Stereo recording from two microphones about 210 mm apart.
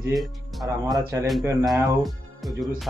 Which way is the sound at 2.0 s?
Centre (ahead or behind).